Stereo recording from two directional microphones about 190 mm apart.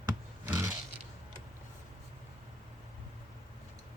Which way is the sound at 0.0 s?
15° right (ahead or behind).